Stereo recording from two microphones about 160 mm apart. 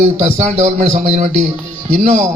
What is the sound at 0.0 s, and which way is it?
A man's voice, 45° right (ahead or behind).